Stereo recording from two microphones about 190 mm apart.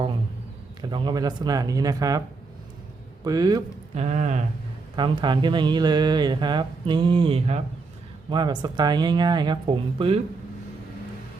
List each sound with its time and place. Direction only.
0.8 s speech: 25° right (ahead or behind)
3.2 s speech: 20° right (ahead or behind)
3.9 s speech: 35° right (ahead or behind)
4.9 s speech: 25° right (ahead or behind)
8.3 s speech: 20° right (ahead or behind)